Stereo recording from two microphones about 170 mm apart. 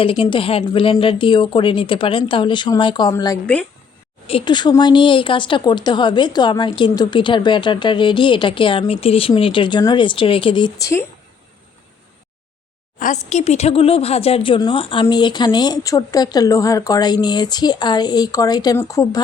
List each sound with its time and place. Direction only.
0.0 s a woman's voice: 30° left (ahead or behind)
3.4 s speech: 5° left (ahead or behind)
4.3 s a woman's voice: 30° left (ahead or behind)
13.0 s a woman's voice: 45° left (ahead or behind); by 19.2 s 20° left (ahead or behind)